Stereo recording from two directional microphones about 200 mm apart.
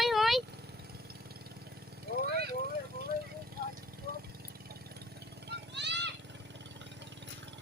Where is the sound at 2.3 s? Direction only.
55° right (ahead or behind).